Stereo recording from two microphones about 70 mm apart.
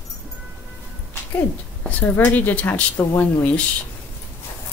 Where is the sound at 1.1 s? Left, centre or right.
Left.